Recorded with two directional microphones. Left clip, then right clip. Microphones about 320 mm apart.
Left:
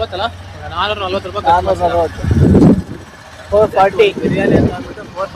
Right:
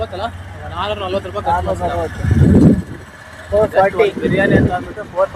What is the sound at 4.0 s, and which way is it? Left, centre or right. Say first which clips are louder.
Speech: left 2 dB; left.